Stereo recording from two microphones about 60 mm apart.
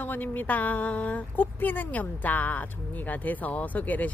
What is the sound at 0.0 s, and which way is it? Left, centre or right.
Speech, left.